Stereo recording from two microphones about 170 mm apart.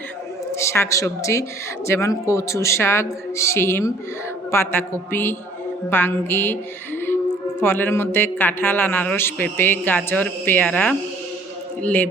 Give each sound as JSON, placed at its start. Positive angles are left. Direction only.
{"t": 0.5, "sound": "a woman's voice", "side_deg": 15}